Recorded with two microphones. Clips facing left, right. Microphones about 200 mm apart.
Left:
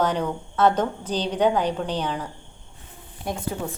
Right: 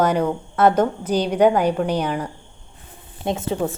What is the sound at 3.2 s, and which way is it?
Speech, 25° right (ahead or behind).